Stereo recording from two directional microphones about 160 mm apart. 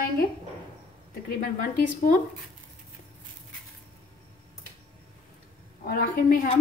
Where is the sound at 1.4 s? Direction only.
55° left (ahead or behind).